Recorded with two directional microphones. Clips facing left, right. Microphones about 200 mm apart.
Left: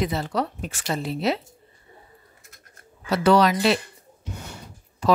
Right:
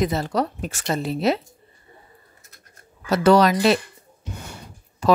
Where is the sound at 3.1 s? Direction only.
45° right (ahead or behind).